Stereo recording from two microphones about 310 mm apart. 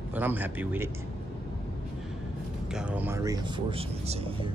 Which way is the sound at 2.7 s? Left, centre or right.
Centre.